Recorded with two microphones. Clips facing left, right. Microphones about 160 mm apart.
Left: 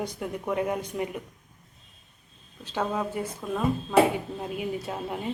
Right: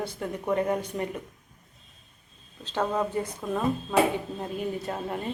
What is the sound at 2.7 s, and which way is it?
A woman's voice, 5° left (ahead or behind).